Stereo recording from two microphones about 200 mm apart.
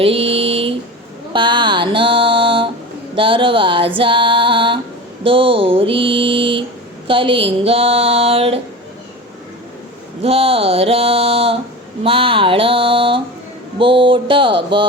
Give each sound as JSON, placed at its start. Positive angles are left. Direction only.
{"t": 0.0, "sound": "a sound", "side_deg": -30}
{"t": 1.3, "sound": "mantra", "side_deg": -25}
{"t": 3.2, "sound": "music", "side_deg": -25}
{"t": 5.2, "sound": "mantra", "side_deg": -25}
{"t": 10.2, "sound": "mantra", "side_deg": -30}